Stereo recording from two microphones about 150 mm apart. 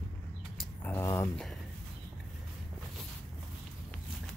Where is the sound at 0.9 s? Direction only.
15° left (ahead or behind).